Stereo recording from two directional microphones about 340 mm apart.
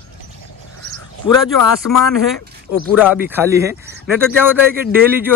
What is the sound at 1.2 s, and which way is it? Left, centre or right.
Speech, left.